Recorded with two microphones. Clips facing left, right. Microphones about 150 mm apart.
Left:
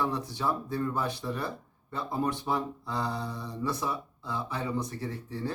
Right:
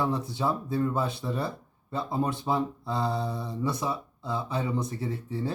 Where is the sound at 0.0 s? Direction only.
20° right (ahead or behind).